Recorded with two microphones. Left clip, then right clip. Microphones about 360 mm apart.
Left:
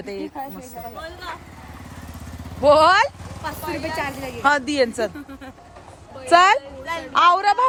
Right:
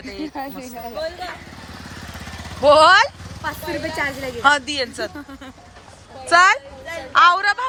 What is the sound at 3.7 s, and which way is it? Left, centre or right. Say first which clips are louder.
Speech: right 1 dB; left.